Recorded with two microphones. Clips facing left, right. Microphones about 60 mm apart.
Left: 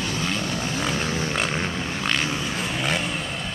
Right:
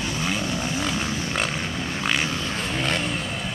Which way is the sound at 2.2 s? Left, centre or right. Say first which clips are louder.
Left 1 dB; centre.